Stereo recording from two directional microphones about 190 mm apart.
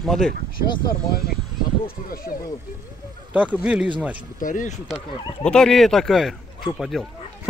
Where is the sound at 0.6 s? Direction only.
50° left (ahead or behind).